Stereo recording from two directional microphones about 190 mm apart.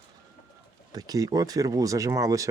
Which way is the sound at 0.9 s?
20° right (ahead or behind).